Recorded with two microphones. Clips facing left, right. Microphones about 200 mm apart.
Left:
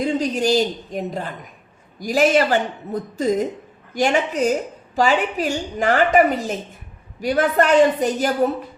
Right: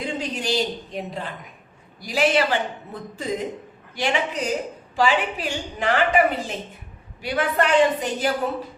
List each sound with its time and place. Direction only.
0.0 s a woman's voice: 40° left (ahead or behind)